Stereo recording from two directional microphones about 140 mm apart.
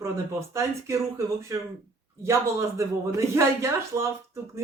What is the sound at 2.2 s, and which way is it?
Speech, 20° right (ahead or behind).